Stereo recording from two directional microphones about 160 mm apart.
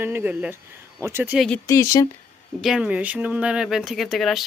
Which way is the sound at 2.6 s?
5° right (ahead or behind).